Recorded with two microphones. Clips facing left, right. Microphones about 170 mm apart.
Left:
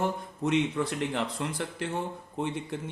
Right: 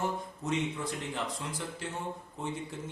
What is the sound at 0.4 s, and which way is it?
Speech, 70° left (ahead or behind).